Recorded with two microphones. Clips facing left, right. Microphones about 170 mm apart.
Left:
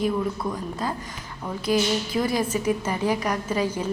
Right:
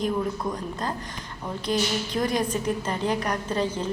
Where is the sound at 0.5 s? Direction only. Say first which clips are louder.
Left 1 dB; 5° left (ahead or behind).